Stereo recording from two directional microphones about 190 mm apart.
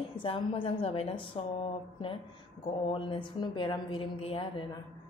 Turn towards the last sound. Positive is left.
turn(degrees=30)  # may be behind; listen again after turning